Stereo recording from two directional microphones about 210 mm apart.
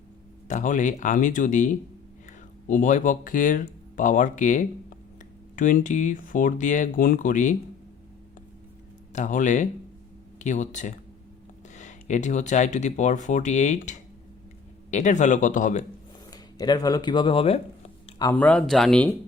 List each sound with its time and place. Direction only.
0.4 s speech: 35° left (ahead or behind)
9.1 s speech: 35° left (ahead or behind)
16.3 s a sound: 20° left (ahead or behind)
18.3 s speech: 5° left (ahead or behind)